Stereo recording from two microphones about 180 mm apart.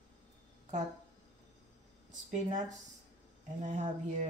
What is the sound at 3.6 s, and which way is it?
Speech, 45° right (ahead or behind).